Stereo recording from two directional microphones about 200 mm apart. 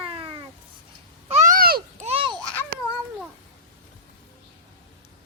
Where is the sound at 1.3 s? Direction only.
40° right (ahead or behind).